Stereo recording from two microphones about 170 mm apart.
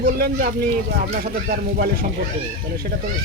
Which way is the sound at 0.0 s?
60° right (ahead or behind).